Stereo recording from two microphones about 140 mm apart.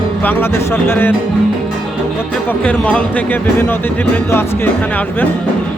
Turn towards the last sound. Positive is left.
turn(degrees=15)  # may be behind; listen again after turning